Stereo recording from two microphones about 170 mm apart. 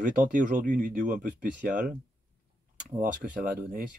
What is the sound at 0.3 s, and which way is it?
Speech, 50° right (ahead or behind).